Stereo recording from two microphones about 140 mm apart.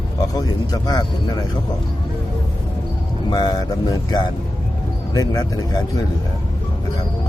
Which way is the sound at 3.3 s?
25° left (ahead or behind).